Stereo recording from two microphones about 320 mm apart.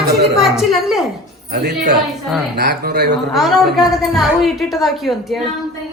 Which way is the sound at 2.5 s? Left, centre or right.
Right.